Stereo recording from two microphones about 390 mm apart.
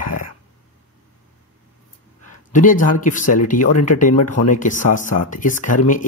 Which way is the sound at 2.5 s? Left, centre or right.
Centre.